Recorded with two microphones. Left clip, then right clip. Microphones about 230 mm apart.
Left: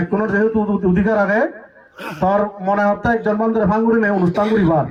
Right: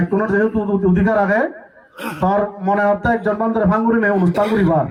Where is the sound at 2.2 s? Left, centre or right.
Left.